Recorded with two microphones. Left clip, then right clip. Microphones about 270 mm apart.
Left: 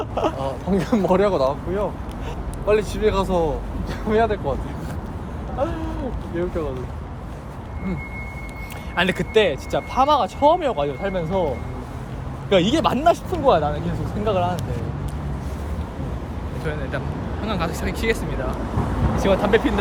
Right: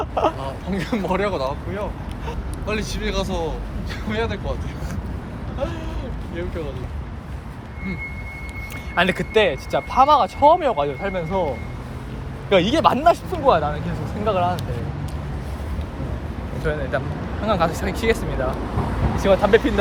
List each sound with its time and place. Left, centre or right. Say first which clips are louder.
0.0 s a sound: right 2 dB; centre
0.3 s speech: left 4 dB; centre
9.0 s speech: right 1 dB; centre
12.5 s speech: right 2 dB; centre
16.7 s speech: right 5 dB; centre